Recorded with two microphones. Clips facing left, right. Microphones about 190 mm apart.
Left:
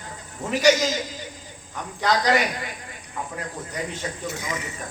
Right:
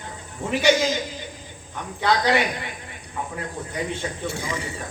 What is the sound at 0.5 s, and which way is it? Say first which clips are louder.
Speech: even; 40° left (ahead or behind).